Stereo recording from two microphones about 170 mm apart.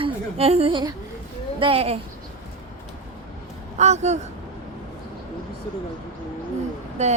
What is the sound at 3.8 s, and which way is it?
Speech, 40° right (ahead or behind).